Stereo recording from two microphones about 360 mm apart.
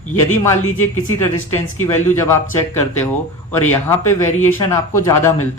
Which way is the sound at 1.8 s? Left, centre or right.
Centre.